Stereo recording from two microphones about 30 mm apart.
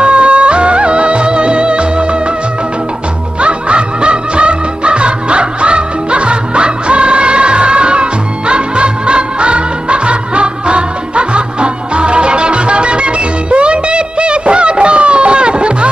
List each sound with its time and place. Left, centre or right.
0.0 s music of bollywood: right
3.3 s music: right